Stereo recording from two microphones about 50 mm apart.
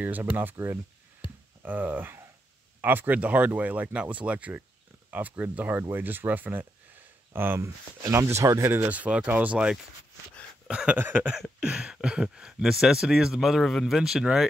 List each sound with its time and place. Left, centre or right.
0.0 s speech: right
1.6 s speech: right
5.8 s speech: right
7.6 s speech: right
8.6 s speech: right
8.9 s speech: right; by 14.5 s centre